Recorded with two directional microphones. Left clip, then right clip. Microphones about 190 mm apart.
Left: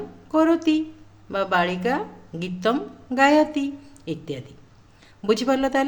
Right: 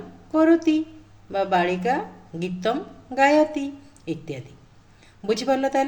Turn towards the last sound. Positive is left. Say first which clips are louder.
# even
turn(degrees=30)  # may be behind; listen again after turning